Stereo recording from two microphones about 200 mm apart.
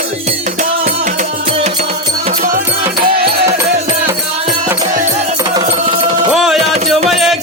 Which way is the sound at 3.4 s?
15° right (ahead or behind).